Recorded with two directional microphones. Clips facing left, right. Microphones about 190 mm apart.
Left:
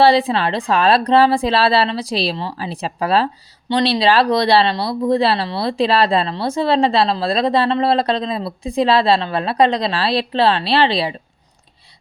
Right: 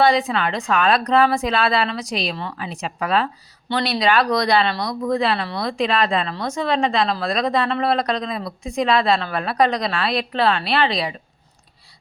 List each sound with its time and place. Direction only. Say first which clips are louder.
0.0 s speech: left 4 dB; 30° left (ahead or behind)